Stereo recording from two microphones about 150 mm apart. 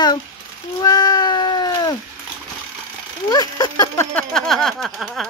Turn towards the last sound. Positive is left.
turn(degrees=0)  # may be behind; listen again after turning